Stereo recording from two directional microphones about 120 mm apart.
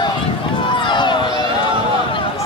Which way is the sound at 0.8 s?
40° left (ahead or behind).